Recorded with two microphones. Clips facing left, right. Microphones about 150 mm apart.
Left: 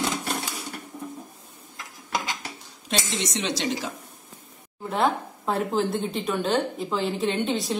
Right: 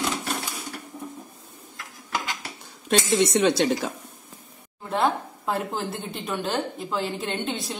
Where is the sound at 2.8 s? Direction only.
55° right (ahead or behind).